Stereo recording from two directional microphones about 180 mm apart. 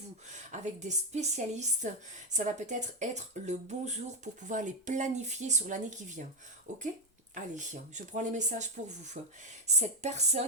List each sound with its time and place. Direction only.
0.3 s speech: 40° right (ahead or behind)
7.3 s speech: 45° right (ahead or behind)